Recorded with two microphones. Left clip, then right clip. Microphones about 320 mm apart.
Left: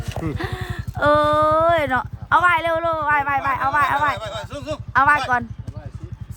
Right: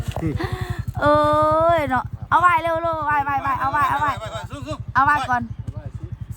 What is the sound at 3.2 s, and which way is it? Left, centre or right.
Speech, centre.